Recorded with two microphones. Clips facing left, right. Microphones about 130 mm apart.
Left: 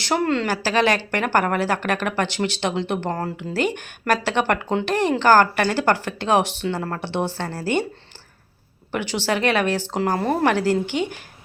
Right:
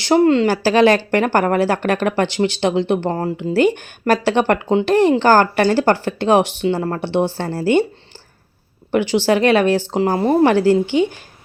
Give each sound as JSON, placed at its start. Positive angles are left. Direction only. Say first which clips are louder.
{"t": 0.0, "sound": "speech", "louder": "right 8 dB", "side_deg": -30}
{"t": 9.2, "sound": "speech", "louder": "right 5 dB", "side_deg": -35}
{"t": 10.0, "sound": "speech", "louder": "right 3 dB", "side_deg": -20}
{"t": 10.4, "sound": "speech", "louder": "right 7 dB", "side_deg": -30}